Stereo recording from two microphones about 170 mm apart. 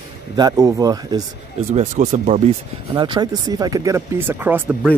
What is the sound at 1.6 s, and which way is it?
Speech, 40° right (ahead or behind).